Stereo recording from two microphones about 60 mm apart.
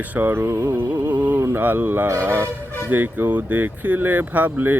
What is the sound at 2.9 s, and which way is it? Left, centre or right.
Speech, right.